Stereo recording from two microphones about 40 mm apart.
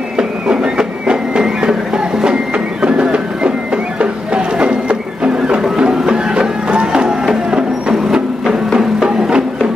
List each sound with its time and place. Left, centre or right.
0.2 s a sound: right
5.8 s music: right
8.7 s music: right